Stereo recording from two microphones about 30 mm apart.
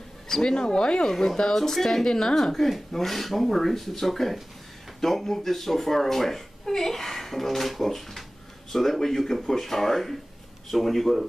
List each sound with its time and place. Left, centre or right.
0.4 s speech: left
1.5 s speech: centre
2.0 s speech: left; by 11.2 s centre